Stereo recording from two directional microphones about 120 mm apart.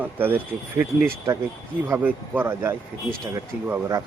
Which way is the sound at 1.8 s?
20° right (ahead or behind).